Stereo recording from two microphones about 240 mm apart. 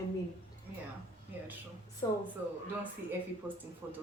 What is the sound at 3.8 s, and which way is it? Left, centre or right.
Speech, centre.